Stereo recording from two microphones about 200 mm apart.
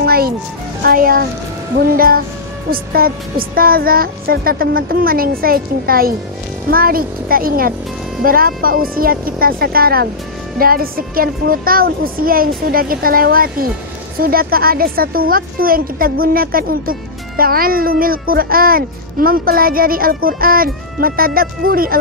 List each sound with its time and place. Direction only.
0.0 s music: 50° right (ahead or behind)
0.8 s speech: 45° right (ahead or behind)